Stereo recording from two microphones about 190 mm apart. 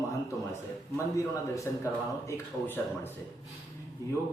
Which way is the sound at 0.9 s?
15° left (ahead or behind).